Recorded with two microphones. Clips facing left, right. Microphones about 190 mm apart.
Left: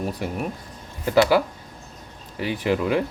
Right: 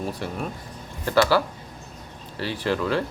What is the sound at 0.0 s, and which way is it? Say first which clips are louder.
Speech: left 2 dB; 15° left (ahead or behind).